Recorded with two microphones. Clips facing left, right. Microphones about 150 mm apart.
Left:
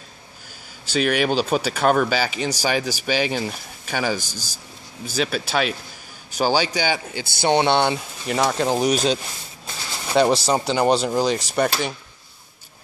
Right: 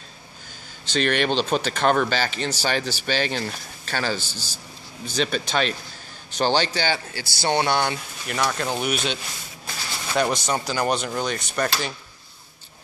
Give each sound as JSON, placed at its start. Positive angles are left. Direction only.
{"t": 0.9, "sound": "speech", "side_deg": 5}